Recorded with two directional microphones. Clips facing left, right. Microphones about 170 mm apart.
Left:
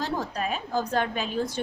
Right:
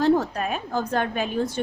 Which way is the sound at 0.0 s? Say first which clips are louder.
Right 9 dB; 50° right (ahead or behind).